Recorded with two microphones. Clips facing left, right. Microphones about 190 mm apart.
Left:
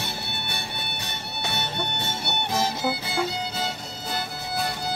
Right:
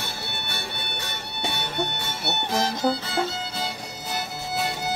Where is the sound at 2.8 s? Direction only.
5° left (ahead or behind).